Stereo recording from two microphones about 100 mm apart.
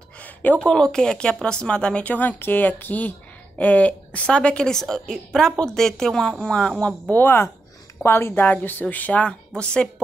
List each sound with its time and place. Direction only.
0.2 s speech: 15° left (ahead or behind)
7.1 s speech: 20° left (ahead or behind)